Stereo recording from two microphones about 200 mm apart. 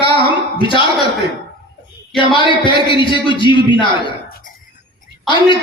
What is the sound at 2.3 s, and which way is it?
A man's voice, 25° left (ahead or behind).